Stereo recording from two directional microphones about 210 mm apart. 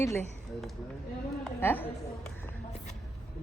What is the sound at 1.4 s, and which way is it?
Speech, 10° left (ahead or behind).